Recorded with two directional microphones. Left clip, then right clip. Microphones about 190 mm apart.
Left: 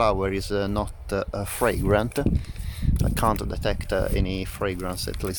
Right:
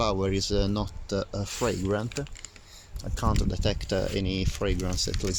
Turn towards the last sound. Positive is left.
turn(degrees=5)  # may be behind; listen again after turning